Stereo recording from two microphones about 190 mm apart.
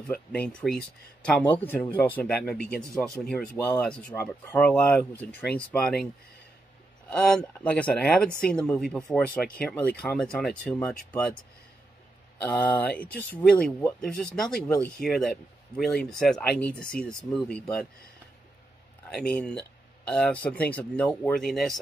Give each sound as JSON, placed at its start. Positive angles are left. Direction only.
{"t": 0.1, "sound": "speech", "side_deg": 5}
{"t": 7.1, "sound": "speech", "side_deg": 5}
{"t": 12.4, "sound": "speech", "side_deg": 10}
{"t": 19.0, "sound": "speech", "side_deg": 5}